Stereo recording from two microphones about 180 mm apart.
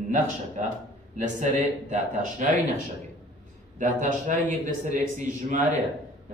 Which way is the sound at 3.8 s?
45° right (ahead or behind).